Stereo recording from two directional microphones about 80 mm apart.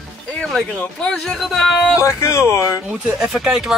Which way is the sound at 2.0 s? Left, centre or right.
Left.